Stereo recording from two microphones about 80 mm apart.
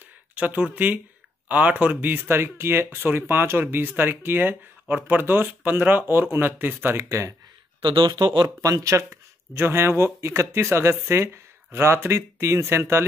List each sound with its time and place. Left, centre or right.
0.3 s speech: centre; by 7.3 s right
7.8 s speech: right
8.6 s speech: right